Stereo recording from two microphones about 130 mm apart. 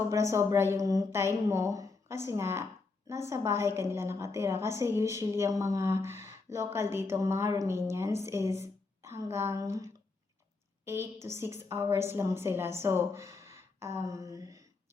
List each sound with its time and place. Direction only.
0.1 s a woman's voice: 20° right (ahead or behind)